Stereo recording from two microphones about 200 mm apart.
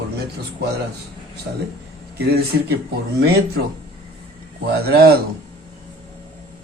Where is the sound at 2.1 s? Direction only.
50° right (ahead or behind).